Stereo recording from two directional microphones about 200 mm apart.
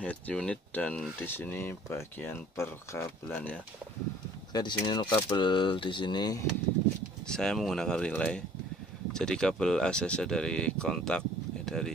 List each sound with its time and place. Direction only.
0.0 s speech: 5° left (ahead or behind)
4.5 s speech: 20° left (ahead or behind)
7.2 s speech: 5° left (ahead or behind)